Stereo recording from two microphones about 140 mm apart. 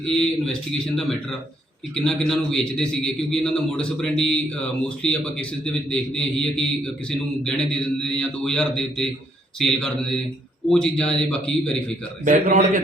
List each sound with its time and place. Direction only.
0.0 s a man's voice: 5° left (ahead or behind)
2.0 s a man's voice: centre (ahead or behind)
12.2 s a man's voice: 70° right (ahead or behind)